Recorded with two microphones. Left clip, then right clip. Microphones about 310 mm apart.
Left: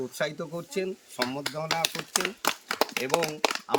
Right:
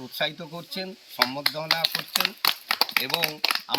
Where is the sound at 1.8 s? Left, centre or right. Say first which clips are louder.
Right 3 dB; left.